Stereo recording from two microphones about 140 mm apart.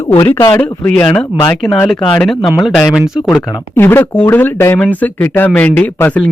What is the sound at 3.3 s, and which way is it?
Speech, 15° left (ahead or behind).